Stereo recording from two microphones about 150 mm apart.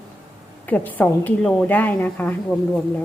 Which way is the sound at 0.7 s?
10° left (ahead or behind).